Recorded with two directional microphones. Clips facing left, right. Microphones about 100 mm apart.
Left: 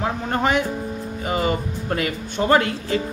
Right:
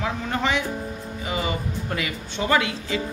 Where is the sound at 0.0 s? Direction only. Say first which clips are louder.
Left 3 dB; 45° left (ahead or behind).